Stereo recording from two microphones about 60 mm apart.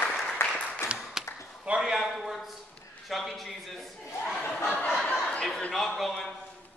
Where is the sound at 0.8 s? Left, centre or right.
Left.